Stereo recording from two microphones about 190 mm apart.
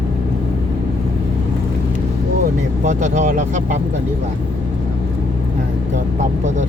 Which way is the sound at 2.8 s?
40° right (ahead or behind).